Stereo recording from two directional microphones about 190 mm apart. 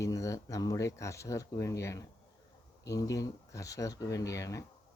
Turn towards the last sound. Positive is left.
turn(degrees=15)  # may be behind; listen again after turning